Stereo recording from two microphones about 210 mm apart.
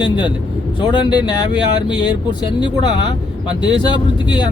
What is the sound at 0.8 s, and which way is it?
Speech, 20° left (ahead or behind).